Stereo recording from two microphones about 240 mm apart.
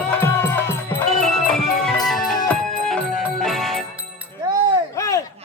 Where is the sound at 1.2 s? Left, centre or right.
Centre.